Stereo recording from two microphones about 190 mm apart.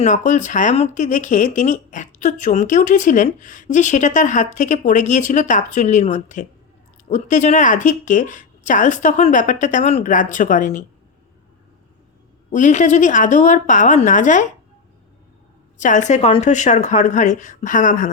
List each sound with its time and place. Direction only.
0.0 s speech: 40° left (ahead or behind)
12.5 s speech: 40° left (ahead or behind)
15.8 s speech: 40° left (ahead or behind)